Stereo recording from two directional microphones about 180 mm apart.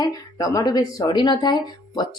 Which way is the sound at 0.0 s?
20° left (ahead or behind).